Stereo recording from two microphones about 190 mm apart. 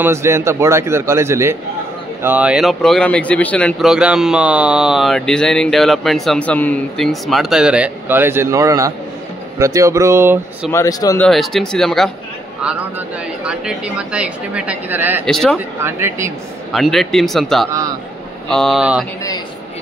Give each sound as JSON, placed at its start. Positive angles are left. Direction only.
{"t": 0.0, "sound": "a woman's voice", "side_deg": -15}
{"t": 10.7, "sound": "speech", "side_deg": 15}
{"t": 11.1, "sound": "a woman's voice", "side_deg": 0}
{"t": 15.2, "sound": "speech", "side_deg": 5}
{"t": 15.5, "sound": "a woman's voice", "side_deg": -15}
{"t": 16.7, "sound": "speech", "side_deg": 0}
{"t": 17.6, "sound": "a woman's voice", "side_deg": -20}
{"t": 18.5, "sound": "speech", "side_deg": 0}